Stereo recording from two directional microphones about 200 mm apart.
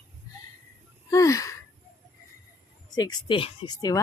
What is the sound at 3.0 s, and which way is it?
Speech, 20° left (ahead or behind).